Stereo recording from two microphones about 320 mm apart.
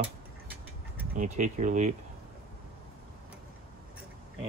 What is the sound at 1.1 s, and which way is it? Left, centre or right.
Speech, right.